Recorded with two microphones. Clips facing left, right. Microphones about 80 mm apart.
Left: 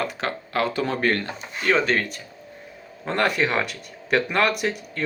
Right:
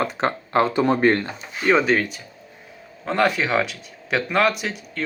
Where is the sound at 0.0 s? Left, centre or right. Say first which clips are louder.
Right 4 dB; right.